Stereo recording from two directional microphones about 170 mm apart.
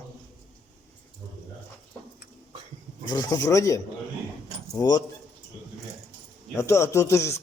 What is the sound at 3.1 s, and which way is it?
Speech, 25° left (ahead or behind).